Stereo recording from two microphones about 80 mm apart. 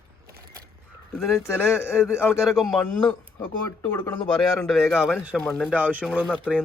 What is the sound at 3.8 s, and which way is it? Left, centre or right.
Speech, left.